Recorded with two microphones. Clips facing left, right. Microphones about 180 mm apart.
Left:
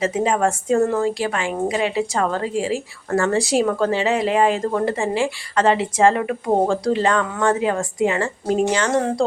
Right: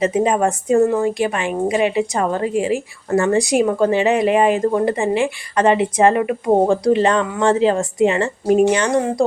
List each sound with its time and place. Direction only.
0.0 s a woman's voice: 20° right (ahead or behind)